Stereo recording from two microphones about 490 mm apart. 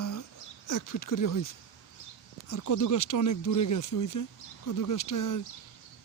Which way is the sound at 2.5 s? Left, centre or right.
Left.